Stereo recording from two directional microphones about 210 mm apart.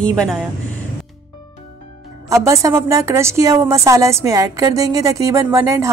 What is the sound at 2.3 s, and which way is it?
A woman's voice, 15° right (ahead or behind).